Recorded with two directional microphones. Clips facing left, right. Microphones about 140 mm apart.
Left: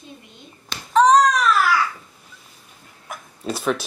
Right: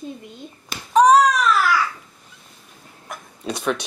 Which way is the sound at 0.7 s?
10° right (ahead or behind).